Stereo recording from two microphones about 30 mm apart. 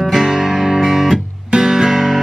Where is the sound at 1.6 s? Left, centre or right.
Centre.